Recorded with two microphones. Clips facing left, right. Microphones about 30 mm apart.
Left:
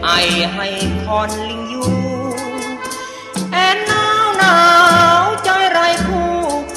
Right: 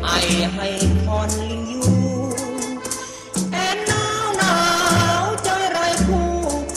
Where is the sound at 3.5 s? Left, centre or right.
Left.